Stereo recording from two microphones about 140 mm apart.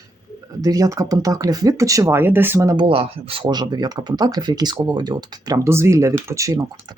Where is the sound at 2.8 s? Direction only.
40° right (ahead or behind); by 6.6 s 25° right (ahead or behind).